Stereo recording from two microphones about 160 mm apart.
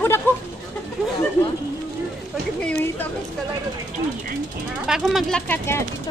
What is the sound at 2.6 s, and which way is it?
Speech, 10° left (ahead or behind).